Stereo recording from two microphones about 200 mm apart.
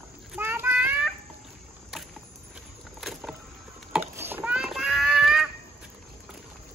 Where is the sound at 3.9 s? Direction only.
10° right (ahead or behind).